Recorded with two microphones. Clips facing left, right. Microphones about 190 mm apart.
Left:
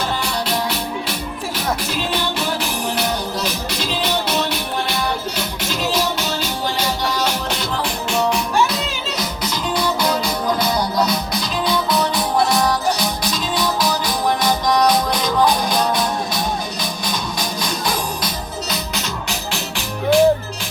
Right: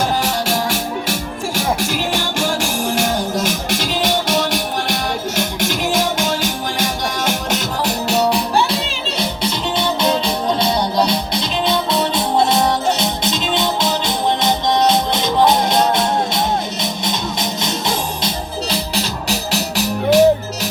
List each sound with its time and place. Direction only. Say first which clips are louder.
0.2 s music: right 3 dB; 45° right (ahead or behind); by 16.4 s 25° right (ahead or behind)
17.6 s music: even; 25° right (ahead or behind)
18.7 s music: right 4 dB; 35° right (ahead or behind)